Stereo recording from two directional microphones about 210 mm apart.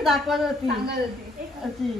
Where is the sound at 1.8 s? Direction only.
Centre (ahead or behind).